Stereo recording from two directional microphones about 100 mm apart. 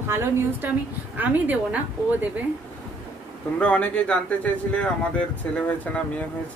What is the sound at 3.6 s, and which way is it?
Speech, 10° left (ahead or behind).